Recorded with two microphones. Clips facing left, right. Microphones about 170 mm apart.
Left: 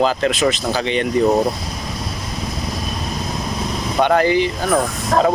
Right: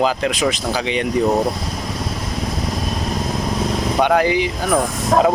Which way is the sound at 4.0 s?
5° right (ahead or behind).